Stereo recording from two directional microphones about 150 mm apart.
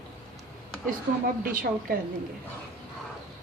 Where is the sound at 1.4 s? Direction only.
70° right (ahead or behind).